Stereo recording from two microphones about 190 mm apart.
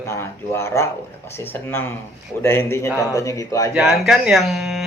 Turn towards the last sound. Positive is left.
turn(degrees=0)  # may be behind; listen again after turning